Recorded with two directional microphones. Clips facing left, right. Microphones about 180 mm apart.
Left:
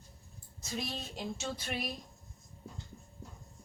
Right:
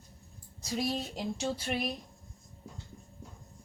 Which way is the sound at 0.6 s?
35° right (ahead or behind).